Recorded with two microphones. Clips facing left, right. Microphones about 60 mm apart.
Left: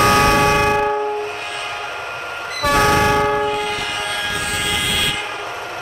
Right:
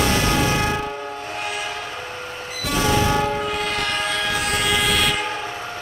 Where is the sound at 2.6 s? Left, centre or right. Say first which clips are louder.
Left 6 dB; left.